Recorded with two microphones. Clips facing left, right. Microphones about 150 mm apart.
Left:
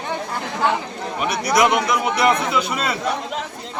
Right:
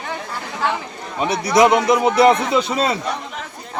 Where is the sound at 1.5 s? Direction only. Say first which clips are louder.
Right 5 dB; 30° right (ahead or behind).